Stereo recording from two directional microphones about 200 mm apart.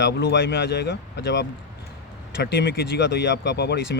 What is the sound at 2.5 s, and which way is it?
Speech, 55° left (ahead or behind).